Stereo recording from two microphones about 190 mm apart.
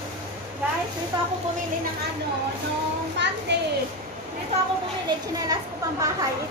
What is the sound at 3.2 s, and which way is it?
Speech, 65° right (ahead or behind).